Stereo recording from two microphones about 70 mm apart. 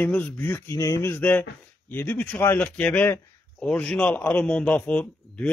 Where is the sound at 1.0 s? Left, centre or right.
Left.